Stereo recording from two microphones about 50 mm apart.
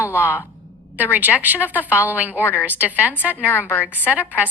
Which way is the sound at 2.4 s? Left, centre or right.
Left.